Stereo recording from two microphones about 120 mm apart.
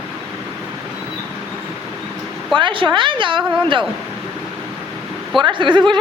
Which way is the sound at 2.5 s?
45° right (ahead or behind).